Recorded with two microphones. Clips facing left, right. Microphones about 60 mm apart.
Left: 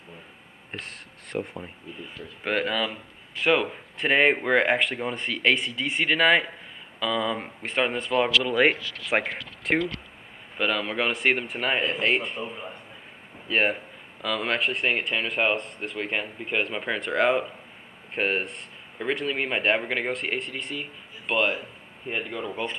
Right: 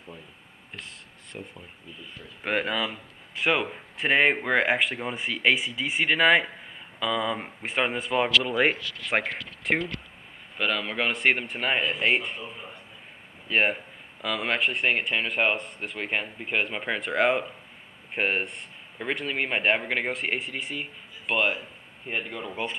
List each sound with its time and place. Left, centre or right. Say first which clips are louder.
0.7 s speech: left 5 dB; left
2.4 s speech: left 1 dB; centre
9.0 s speech: left 1 dB; centre
13.5 s speech: even; centre